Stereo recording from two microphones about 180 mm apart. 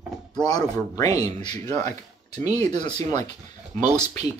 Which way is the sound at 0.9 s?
20° left (ahead or behind).